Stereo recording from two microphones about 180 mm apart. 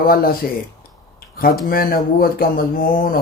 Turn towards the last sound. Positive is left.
turn(degrees=55)  # may be behind; listen again after turning